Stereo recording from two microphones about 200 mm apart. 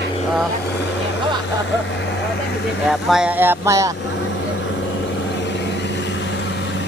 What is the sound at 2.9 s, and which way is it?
Speech, centre (ahead or behind).